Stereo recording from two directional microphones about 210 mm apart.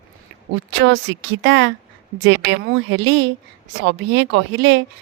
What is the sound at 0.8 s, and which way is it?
A woman's voice, 60° right (ahead or behind).